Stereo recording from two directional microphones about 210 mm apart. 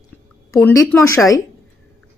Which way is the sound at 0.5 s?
10° left (ahead or behind).